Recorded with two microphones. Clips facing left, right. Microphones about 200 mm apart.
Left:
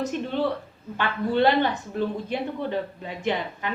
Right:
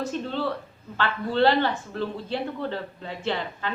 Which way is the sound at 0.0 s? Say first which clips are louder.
Left 2 dB; 15° left (ahead or behind).